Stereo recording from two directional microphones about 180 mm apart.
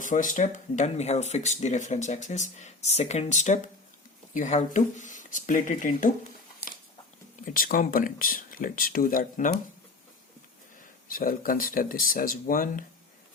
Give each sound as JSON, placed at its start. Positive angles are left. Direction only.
{"t": 0.0, "sound": "speech", "side_deg": 45}
{"t": 7.4, "sound": "speech", "side_deg": 50}
{"t": 11.1, "sound": "speech", "side_deg": 55}